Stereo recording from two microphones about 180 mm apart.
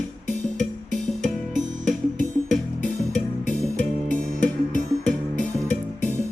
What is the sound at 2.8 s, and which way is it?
Music, 45° left (ahead or behind).